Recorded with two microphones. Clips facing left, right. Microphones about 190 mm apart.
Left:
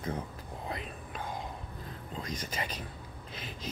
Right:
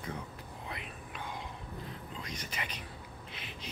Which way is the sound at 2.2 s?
40° left (ahead or behind).